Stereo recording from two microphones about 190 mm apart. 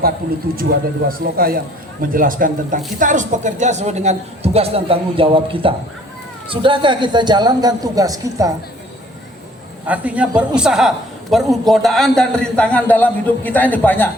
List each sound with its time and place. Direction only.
0.5 s speech: 50° right (ahead or behind); by 8.5 s 20° right (ahead or behind)
9.8 s a man's voice: 10° right (ahead or behind); by 14.1 s 10° left (ahead or behind)